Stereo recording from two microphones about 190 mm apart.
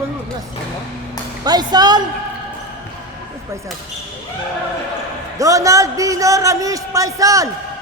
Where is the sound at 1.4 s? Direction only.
20° right (ahead or behind).